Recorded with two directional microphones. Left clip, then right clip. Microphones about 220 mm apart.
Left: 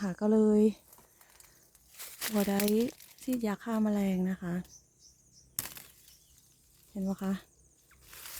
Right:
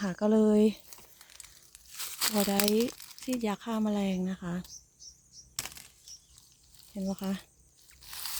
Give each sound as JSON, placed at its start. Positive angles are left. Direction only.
{"t": 0.0, "sound": "speech", "side_deg": 0}
{"t": 0.9, "sound": "a sound", "side_deg": -35}
{"t": 1.9, "sound": "tearing", "side_deg": -45}
{"t": 2.6, "sound": "speech", "side_deg": -50}
{"t": 2.9, "sound": "crumpling", "side_deg": -50}
{"t": 3.2, "sound": "speech", "side_deg": 10}
{"t": 5.6, "sound": "bird flight", "side_deg": 10}
{"t": 6.9, "sound": "speech", "side_deg": 10}
{"t": 8.0, "sound": "zipper", "side_deg": -50}